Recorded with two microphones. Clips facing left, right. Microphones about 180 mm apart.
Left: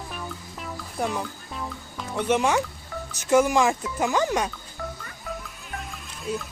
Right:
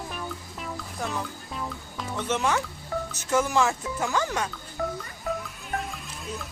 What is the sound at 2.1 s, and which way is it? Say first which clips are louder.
Speech: left 4 dB; 15° left (ahead or behind).